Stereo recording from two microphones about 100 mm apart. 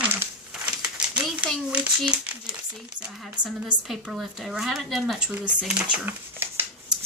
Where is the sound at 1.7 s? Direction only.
10° right (ahead or behind).